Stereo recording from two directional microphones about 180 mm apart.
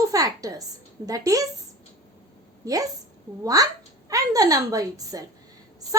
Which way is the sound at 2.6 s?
20° right (ahead or behind).